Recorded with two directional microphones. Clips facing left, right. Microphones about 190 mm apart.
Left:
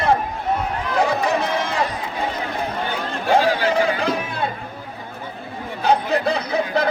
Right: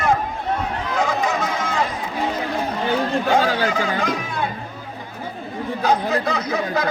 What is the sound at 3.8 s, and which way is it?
Music, 30° left (ahead or behind).